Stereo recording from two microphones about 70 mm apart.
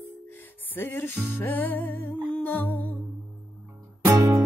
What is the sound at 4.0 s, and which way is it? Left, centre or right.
Music, right.